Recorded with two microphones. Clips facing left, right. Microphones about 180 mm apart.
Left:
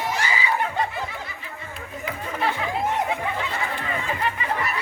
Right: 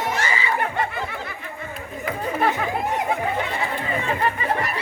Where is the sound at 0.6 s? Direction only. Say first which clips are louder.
Right 1 dB; 55° right (ahead or behind).